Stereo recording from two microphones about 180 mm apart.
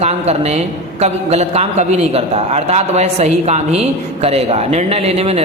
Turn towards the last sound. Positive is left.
turn(degrees=-35)  # may be behind; listen again after turning